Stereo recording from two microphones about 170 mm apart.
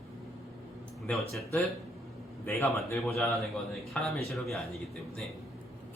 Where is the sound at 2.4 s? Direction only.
15° left (ahead or behind).